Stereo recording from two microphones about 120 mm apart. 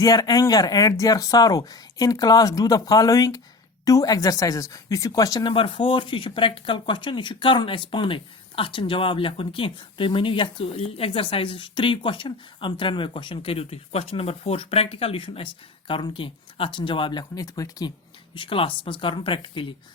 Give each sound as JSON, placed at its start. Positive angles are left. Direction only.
{"t": 0.0, "sound": "speech", "side_deg": 30}
{"t": 18.3, "sound": "speech", "side_deg": 50}